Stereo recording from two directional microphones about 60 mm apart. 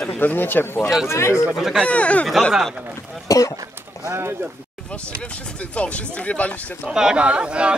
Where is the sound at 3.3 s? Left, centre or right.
Left.